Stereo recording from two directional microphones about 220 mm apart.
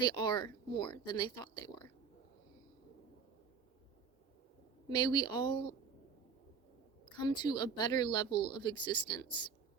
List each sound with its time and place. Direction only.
0.0 s speech: 20° left (ahead or behind)
4.9 s speech: 20° left (ahead or behind)
7.2 s speech: 20° left (ahead or behind)